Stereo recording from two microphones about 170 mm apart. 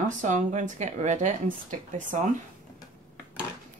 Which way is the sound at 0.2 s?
45° right (ahead or behind).